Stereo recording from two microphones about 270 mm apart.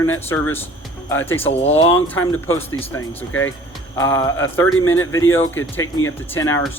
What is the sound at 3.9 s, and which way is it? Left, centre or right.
Speech, centre.